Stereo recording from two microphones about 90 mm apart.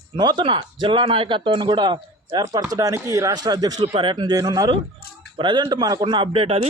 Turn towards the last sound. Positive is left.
turn(degrees=-85)